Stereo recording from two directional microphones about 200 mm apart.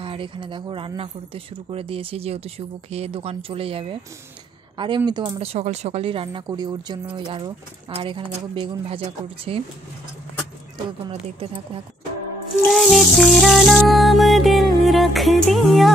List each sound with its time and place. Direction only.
0.0 s speech: 25° right (ahead or behind)
12.6 s music: centre (ahead or behind)